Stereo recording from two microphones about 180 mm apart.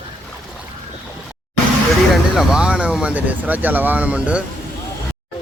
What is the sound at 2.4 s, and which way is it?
Speech, 5° right (ahead or behind).